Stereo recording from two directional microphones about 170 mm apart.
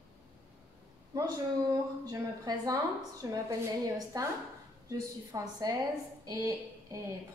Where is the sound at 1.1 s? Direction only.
20° right (ahead or behind).